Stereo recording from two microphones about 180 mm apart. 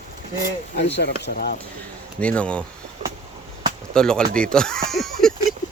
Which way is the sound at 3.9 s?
5° left (ahead or behind).